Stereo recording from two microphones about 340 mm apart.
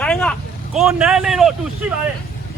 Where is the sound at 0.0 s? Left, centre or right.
Centre.